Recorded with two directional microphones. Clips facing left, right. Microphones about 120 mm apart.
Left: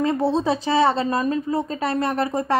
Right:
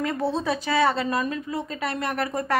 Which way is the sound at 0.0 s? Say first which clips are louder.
Left 5 dB; 30° left (ahead or behind).